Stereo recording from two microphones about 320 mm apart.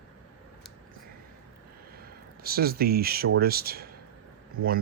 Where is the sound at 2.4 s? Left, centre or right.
Right.